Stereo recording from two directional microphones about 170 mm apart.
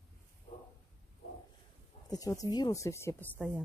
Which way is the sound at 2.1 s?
20° left (ahead or behind).